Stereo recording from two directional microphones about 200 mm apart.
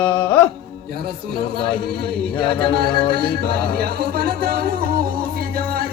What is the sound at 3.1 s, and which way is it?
Music, 50° right (ahead or behind).